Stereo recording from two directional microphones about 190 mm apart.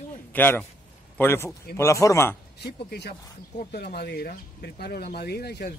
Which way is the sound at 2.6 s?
60° left (ahead or behind).